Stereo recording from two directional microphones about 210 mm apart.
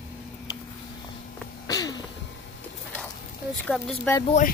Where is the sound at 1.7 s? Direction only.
15° left (ahead or behind).